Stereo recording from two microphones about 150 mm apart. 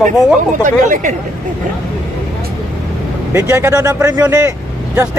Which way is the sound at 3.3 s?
20° right (ahead or behind).